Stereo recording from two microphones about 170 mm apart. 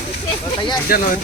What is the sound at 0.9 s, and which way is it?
Speech, 60° left (ahead or behind).